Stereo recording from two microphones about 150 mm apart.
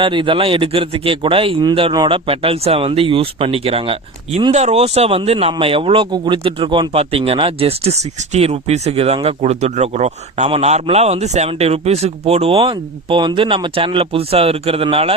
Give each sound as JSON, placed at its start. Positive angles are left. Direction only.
{"t": 0.0, "sound": "a man's voice", "side_deg": -35}